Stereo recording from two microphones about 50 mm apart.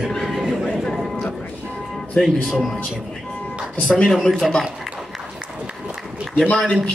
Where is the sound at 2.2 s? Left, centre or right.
Left.